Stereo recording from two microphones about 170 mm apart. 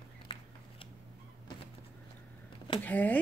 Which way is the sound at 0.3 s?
30° left (ahead or behind).